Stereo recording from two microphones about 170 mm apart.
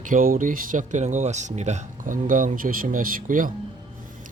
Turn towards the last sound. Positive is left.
turn(degrees=-50)  # may be behind; listen again after turning